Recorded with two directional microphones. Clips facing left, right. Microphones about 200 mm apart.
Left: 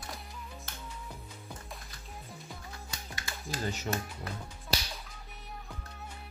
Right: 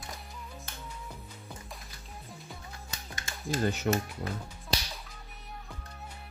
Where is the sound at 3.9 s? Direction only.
60° right (ahead or behind).